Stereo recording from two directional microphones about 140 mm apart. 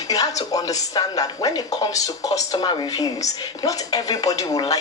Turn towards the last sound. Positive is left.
turn(degrees=25)  # may be behind; listen again after turning